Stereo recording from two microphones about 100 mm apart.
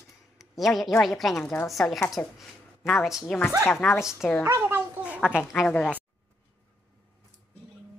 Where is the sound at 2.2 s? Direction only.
15° left (ahead or behind).